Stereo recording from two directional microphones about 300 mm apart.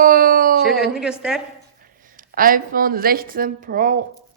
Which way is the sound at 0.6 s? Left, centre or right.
Left.